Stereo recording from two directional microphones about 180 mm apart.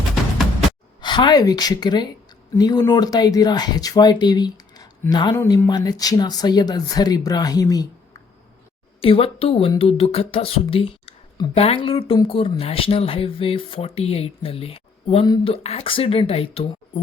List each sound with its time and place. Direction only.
1.0 s speech: 25° left (ahead or behind)
9.0 s speech: 30° left (ahead or behind)